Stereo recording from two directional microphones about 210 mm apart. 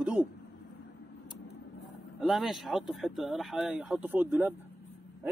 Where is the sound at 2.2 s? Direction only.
Centre (ahead or behind).